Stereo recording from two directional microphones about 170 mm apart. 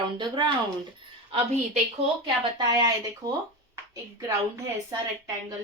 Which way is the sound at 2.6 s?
25° right (ahead or behind).